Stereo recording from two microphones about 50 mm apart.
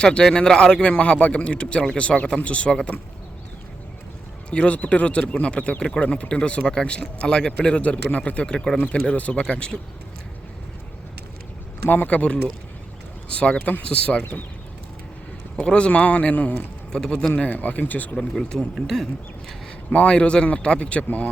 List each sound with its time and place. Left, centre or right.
0.0 s a man's voice: centre
4.5 s a man's voice: left
8.4 s speech: centre
9.0 s a man's voice: left
11.9 s speech: left
12.1 s a man's voice: left
15.5 s a man's voice: left
16.9 s speech: centre
17.3 s speech: left
18.3 s speech: centre
19.9 s a man's voice: left